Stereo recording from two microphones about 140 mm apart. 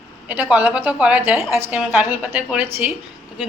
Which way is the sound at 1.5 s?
15° right (ahead or behind).